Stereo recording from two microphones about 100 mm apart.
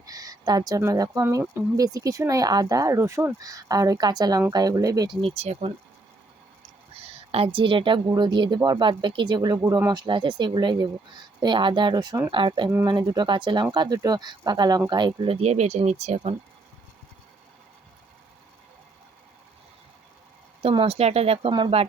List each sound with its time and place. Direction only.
0.0 s a sound: 40° right (ahead or behind)
0.8 s speech: 35° right (ahead or behind)
3.3 s speech: 35° right (ahead or behind)
5.0 s speech: 65° right (ahead or behind); by 5.7 s 90° right
6.9 s speech: 85° right; by 9.8 s 35° right (ahead or behind)
9.9 s speech: 55° right (ahead or behind)
15.4 s speech: 90° right
20.6 s speech: 85° right